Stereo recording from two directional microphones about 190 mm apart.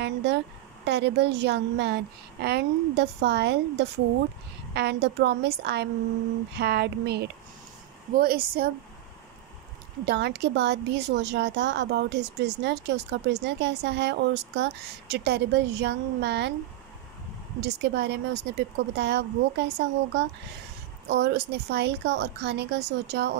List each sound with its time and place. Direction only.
0.0 s a woman's voice: 65° right (ahead or behind)
10.0 s speech: 60° right (ahead or behind)
17.6 s speech: 65° right (ahead or behind)